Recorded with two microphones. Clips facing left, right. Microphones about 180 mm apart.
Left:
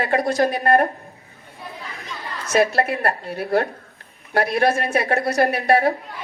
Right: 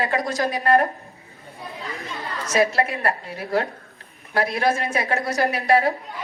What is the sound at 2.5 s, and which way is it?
Speech, 60° left (ahead or behind).